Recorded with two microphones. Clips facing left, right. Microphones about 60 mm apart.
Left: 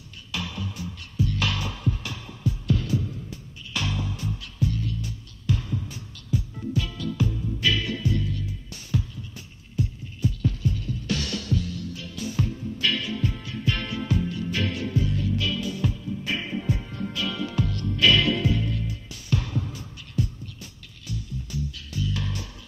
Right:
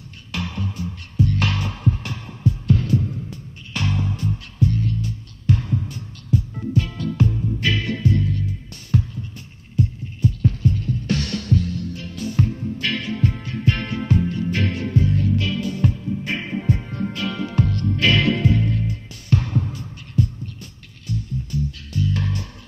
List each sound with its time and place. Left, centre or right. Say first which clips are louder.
0.3 s music: right 4 dB; right